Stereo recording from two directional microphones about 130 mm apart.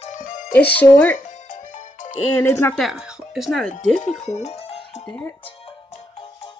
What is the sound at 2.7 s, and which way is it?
Speech, centre (ahead or behind).